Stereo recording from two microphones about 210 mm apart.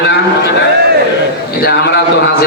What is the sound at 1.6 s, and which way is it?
Speech, 50° left (ahead or behind).